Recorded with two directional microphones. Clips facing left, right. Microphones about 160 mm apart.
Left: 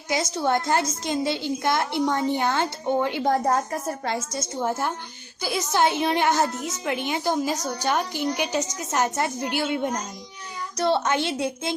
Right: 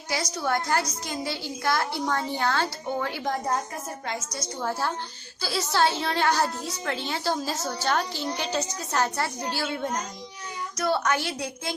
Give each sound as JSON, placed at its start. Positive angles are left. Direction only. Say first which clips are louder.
{"t": 0.1, "sound": "a woman's voice", "louder": "left 4 dB", "side_deg": 25}
{"t": 3.2, "sound": "a woman's voice", "louder": "left 8 dB", "side_deg": 45}
{"t": 4.0, "sound": "a woman's voice", "louder": "left 5 dB", "side_deg": 30}